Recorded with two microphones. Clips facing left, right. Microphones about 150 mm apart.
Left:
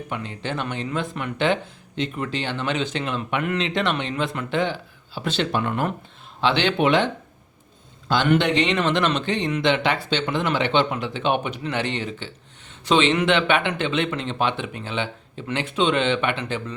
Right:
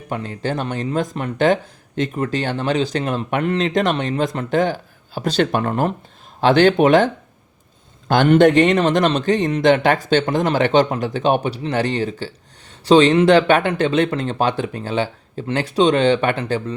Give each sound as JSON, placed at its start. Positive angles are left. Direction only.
{"t": 0.1, "sound": "a man's voice", "side_deg": -40}